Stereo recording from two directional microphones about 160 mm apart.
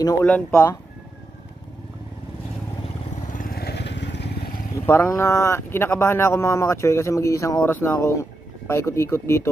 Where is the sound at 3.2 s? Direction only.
60° left (ahead or behind); by 4.6 s 80° left.